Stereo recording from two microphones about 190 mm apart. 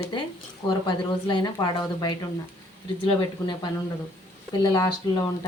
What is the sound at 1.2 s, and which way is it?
Speech, 25° left (ahead or behind).